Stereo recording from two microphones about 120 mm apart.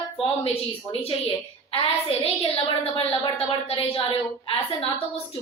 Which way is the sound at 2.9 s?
50° left (ahead or behind).